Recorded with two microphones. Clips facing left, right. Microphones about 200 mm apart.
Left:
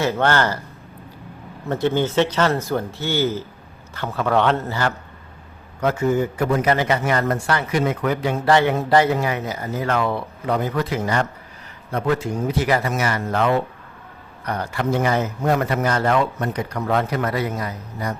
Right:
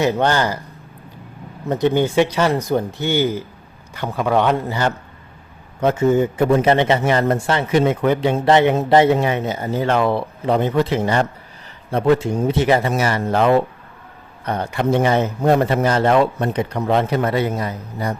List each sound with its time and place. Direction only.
0.0 s speech: 15° right (ahead or behind)
1.6 s a man's voice: 15° right (ahead or behind)